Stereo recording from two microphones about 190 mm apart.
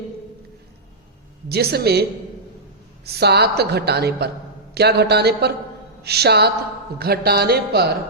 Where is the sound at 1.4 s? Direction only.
55° right (ahead or behind).